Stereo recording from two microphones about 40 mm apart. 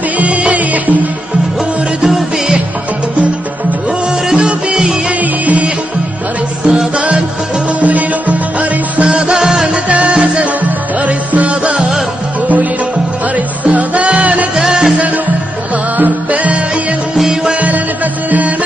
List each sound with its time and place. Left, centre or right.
0.2 s music: right
2.0 s music: centre
4.3 s music: right
5.2 s music: right
6.6 s music: right
7.8 s music: right
9.0 s music: centre
9.8 s music: right
10.4 s music: right
13.7 s music: right
14.6 s music: centre
16.0 s music: right
17.1 s music: centre
17.6 s music: right